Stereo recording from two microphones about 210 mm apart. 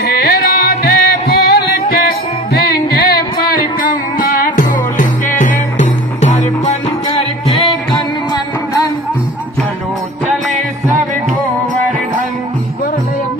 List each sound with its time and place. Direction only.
0.1 s music: 50° left (ahead or behind)
4.2 s music: 40° left (ahead or behind)
10.3 s music: centre (ahead or behind)